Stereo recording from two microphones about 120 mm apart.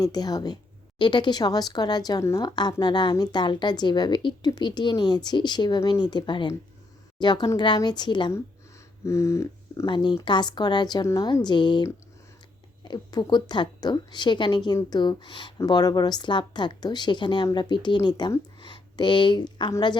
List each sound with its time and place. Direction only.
0.0 s speech: 35° left (ahead or behind)
9.0 s speech: 25° left (ahead or behind)
9.8 s speech: 40° left (ahead or behind)
11.4 s speech: 40° left (ahead or behind)